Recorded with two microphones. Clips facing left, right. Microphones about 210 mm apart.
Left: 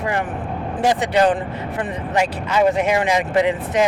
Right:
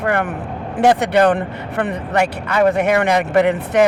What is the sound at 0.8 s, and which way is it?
Speech, 65° right (ahead or behind).